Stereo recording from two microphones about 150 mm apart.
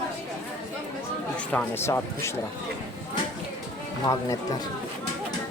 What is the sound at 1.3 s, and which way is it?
Speech, 10° left (ahead or behind).